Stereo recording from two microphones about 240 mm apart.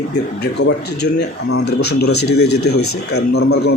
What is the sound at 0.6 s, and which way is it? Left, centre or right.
Speech, left.